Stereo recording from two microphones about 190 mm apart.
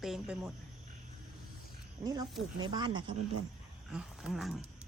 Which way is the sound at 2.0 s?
20° right (ahead or behind).